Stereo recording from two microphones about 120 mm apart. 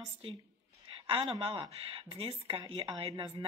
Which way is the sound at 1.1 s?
50° right (ahead or behind).